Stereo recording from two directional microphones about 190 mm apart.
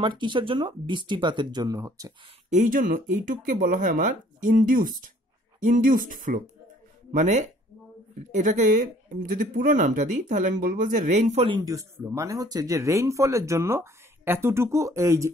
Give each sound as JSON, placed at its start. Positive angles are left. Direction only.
{"t": 0.0, "sound": "speech", "side_deg": -25}
{"t": 2.5, "sound": "speech", "side_deg": -40}
{"t": 11.4, "sound": "speech", "side_deg": -20}